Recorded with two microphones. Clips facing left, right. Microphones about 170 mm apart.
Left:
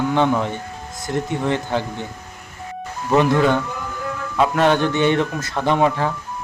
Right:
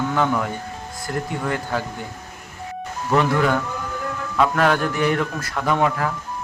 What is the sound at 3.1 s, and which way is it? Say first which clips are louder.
A man's voice: left 3 dB; 20° left (ahead or behind).